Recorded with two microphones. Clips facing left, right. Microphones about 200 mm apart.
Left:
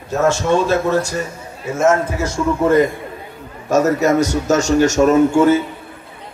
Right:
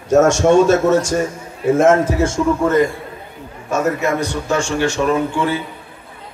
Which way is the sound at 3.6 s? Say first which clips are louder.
Left 4 dB; 40° left (ahead or behind).